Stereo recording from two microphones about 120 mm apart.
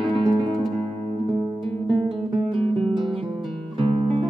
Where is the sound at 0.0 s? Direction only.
45° right (ahead or behind).